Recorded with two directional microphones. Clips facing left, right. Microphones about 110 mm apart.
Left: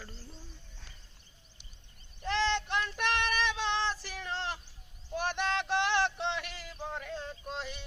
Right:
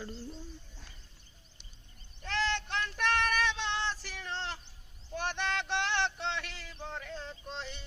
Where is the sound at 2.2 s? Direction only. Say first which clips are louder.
Left 3 dB; 15° left (ahead or behind).